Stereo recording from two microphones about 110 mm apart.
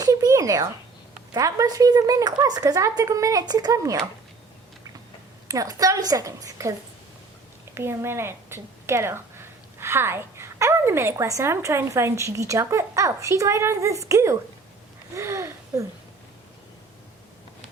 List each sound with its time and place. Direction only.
0.0 s a sound: 35° right (ahead or behind)
1.3 s speech: 30° right (ahead or behind)
5.5 s speech: 35° right (ahead or behind)
7.8 s a woman's voice: 20° right (ahead or behind)